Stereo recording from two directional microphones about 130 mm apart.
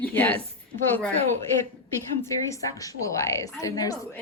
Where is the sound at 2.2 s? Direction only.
25° left (ahead or behind).